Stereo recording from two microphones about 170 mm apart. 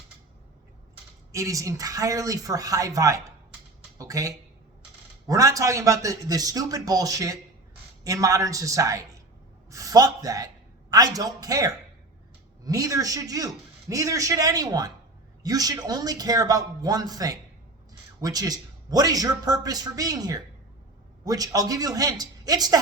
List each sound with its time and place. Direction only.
1.3 s a man's voice: 20° right (ahead or behind)